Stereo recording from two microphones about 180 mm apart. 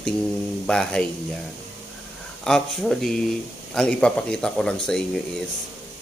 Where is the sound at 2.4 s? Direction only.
Centre (ahead or behind).